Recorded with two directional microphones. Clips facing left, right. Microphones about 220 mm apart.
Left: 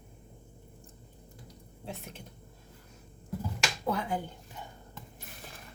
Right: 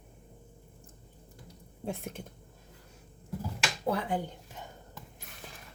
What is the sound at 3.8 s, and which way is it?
Speech, 30° right (ahead or behind).